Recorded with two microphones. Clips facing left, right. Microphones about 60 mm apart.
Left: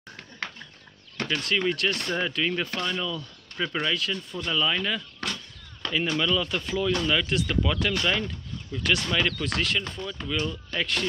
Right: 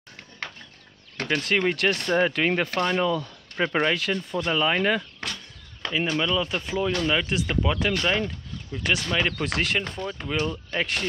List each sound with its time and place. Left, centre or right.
1.3 s speech: right
1.8 s speech: right
5.8 s speech: centre